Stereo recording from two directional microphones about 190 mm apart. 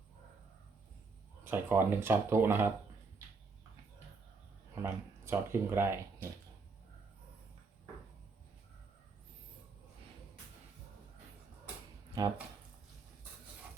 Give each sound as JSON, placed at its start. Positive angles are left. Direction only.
{"t": 1.5, "sound": "speech", "side_deg": -10}
{"t": 4.7, "sound": "speech", "side_deg": -15}
{"t": 12.2, "sound": "speech", "side_deg": -20}